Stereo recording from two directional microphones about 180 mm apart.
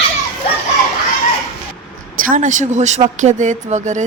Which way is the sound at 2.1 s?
45° right (ahead or behind).